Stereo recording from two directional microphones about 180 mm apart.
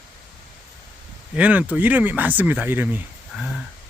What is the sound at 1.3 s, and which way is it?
Speech, 10° right (ahead or behind).